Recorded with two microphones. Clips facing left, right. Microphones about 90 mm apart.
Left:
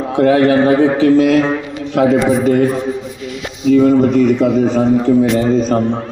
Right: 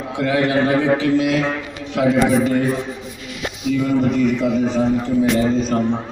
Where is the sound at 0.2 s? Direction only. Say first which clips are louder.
Left 7 dB; 40° left (ahead or behind).